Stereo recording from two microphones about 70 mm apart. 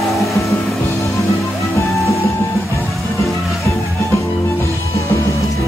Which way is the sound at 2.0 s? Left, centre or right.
Left.